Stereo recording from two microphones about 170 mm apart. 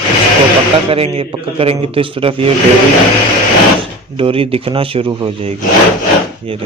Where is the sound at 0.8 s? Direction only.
35° right (ahead or behind).